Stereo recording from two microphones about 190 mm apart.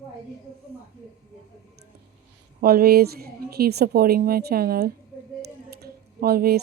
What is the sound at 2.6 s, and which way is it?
A woman's voice, 55° right (ahead or behind).